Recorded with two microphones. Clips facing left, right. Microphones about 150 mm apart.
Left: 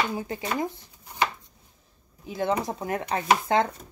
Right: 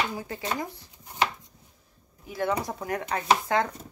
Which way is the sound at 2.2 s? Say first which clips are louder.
Left 2 dB; 25° left (ahead or behind).